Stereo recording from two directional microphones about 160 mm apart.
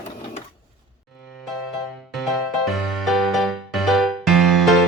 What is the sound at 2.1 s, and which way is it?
Music, centre (ahead or behind).